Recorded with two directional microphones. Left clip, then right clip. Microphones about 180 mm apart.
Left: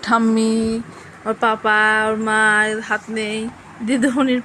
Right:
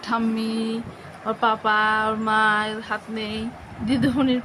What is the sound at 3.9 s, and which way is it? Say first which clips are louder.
Speech: left 4 dB; 20° left (ahead or behind).